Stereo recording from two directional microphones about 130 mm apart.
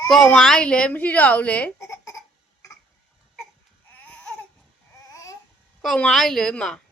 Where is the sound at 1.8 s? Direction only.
25° left (ahead or behind).